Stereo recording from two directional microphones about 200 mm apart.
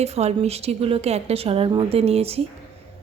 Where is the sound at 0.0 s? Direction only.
30° right (ahead or behind).